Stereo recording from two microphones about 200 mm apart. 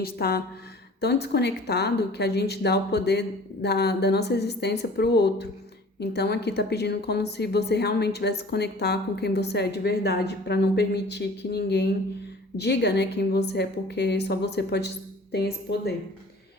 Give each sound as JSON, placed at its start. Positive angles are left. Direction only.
{"t": 0.0, "sound": "a woman's voice", "side_deg": 50}